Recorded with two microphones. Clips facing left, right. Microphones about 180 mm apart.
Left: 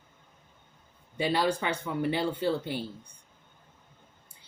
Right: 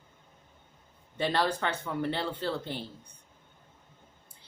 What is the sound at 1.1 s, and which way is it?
A woman's voice, 10° left (ahead or behind).